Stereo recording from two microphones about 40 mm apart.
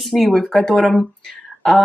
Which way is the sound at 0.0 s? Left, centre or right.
Centre.